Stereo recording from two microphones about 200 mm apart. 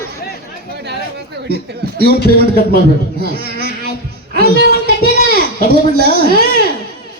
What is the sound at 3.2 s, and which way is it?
Speech, 50° right (ahead or behind).